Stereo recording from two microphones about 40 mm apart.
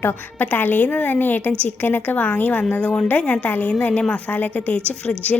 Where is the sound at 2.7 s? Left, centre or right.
Left.